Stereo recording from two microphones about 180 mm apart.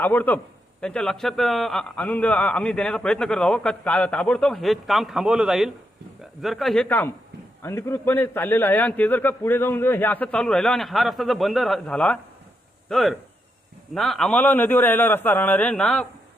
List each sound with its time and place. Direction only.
0.0 s a man's voice: 10° left (ahead or behind)